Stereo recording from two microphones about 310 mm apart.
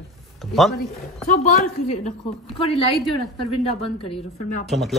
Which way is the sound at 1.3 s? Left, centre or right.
Left.